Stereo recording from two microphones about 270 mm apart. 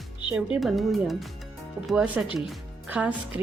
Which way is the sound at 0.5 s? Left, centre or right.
Centre.